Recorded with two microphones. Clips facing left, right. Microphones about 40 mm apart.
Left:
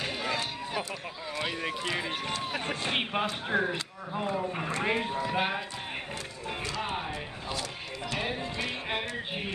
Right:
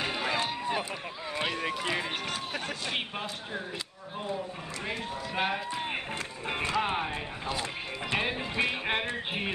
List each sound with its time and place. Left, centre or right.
0.0 s run: centre
1.5 s speech: centre
2.6 s speech: left
3.5 s speech: left
4.6 s speech: left
5.3 s speech: centre
6.4 s speech: right
8.1 s speech: right